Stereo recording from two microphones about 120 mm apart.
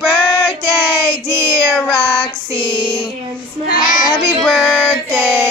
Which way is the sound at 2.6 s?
40° left (ahead or behind).